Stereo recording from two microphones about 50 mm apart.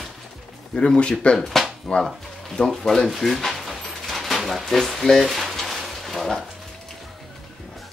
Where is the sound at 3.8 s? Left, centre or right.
Centre.